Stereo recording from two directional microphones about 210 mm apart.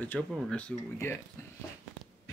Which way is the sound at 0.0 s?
5° left (ahead or behind).